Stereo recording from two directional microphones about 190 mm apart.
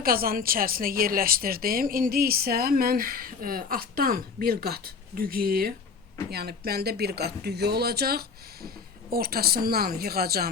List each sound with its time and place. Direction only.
0.0 s a woman's voice: 50° right (ahead or behind)